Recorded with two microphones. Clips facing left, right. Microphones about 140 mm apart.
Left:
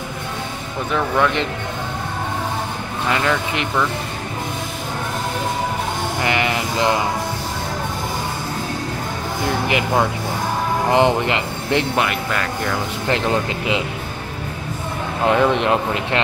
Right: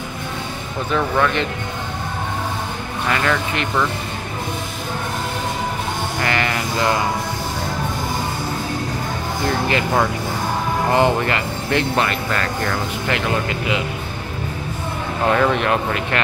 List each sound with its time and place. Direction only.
3.1 s speech: 20° left (ahead or behind)
6.2 s speech: 20° left (ahead or behind)
9.7 s speech: 15° left (ahead or behind)
11.9 s speech: 10° left (ahead or behind)
13.1 s speech: 25° left (ahead or behind)
15.2 s speech: 15° left (ahead or behind)